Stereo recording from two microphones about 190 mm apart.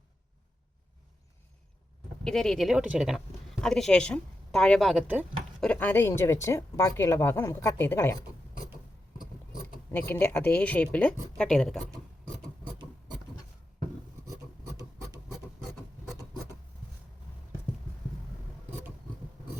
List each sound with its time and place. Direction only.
2.2 s a woman's voice: 5° left (ahead or behind)
5.5 s speech: 5° left (ahead or behind)
9.1 s mechanisms: 20° left (ahead or behind)
10.1 s speech: 10° left (ahead or behind)